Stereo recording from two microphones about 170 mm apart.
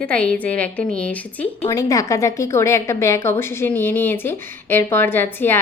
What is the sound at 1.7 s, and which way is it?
A woman's voice, 20° left (ahead or behind).